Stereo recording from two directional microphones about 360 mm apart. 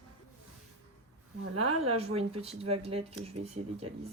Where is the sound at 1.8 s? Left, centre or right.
Centre.